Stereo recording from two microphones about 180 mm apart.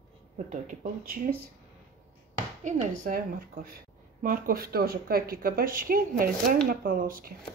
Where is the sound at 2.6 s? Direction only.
45° right (ahead or behind).